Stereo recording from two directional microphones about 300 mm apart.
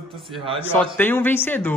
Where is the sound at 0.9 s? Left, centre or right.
Centre.